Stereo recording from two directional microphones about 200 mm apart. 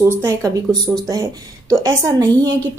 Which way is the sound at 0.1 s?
15° right (ahead or behind).